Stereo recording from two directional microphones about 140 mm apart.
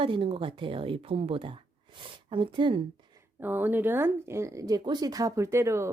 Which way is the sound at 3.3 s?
15° right (ahead or behind).